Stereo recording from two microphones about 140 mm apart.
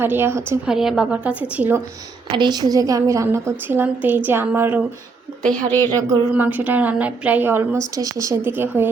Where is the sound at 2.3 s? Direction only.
30° right (ahead or behind); by 4.8 s 15° right (ahead or behind).